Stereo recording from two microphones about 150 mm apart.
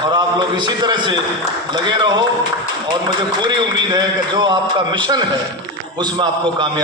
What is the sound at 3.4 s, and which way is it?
A man's voice, 30° right (ahead or behind).